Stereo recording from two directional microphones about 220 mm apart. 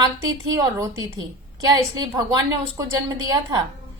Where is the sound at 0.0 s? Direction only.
15° right (ahead or behind).